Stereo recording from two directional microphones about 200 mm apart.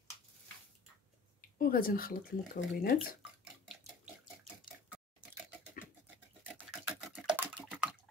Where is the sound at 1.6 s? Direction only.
45° left (ahead or behind).